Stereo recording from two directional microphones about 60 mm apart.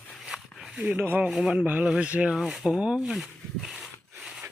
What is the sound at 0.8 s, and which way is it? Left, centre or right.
Speech, right.